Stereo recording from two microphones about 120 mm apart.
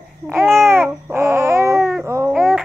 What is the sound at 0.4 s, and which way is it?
Babbling, 20° right (ahead or behind).